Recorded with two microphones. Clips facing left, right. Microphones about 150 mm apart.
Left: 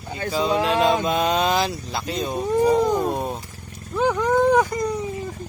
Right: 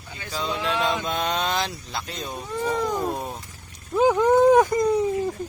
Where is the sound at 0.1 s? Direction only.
45° left (ahead or behind).